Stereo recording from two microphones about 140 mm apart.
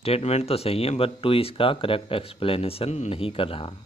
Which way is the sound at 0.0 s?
45° left (ahead or behind).